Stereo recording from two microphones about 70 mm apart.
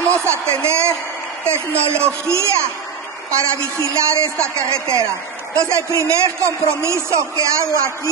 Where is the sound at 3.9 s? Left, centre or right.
Right.